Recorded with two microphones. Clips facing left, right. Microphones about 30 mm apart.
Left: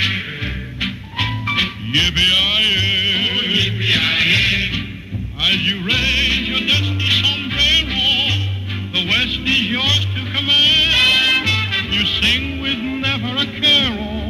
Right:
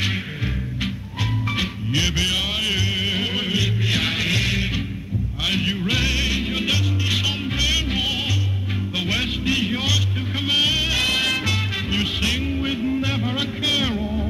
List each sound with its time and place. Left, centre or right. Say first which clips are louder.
0.8 s music: left 8 dB; left